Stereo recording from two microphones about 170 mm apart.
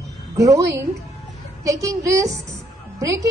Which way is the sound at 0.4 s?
20° right (ahead or behind).